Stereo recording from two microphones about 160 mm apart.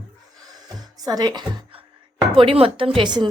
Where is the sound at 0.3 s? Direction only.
25° right (ahead or behind).